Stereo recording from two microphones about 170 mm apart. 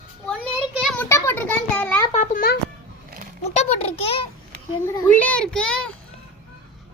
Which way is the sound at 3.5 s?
40° left (ahead or behind).